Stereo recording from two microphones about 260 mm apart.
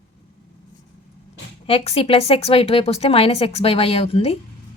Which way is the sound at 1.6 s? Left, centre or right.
Left.